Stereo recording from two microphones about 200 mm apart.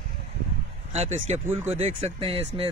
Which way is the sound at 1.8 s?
25° right (ahead or behind).